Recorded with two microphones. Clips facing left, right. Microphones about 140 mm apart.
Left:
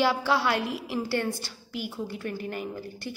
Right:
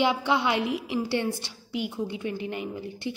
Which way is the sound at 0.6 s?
65° right (ahead or behind).